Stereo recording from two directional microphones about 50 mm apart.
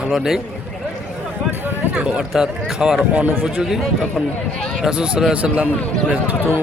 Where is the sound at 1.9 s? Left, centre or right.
Right.